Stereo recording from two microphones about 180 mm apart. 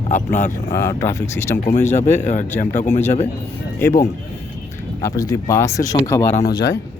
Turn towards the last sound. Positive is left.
turn(degrees=20)  # may be behind; listen again after turning